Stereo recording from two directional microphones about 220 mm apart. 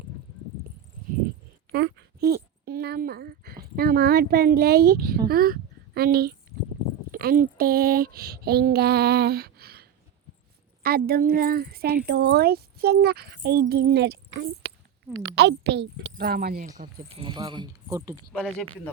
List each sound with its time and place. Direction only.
1.7 s speech: 45° right (ahead or behind)
10.8 s speech: 45° right (ahead or behind)
17.2 s speech: 20° right (ahead or behind)